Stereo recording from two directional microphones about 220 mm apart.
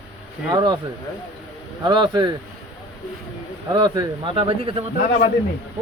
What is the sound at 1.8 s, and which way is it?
Speech, 20° right (ahead or behind).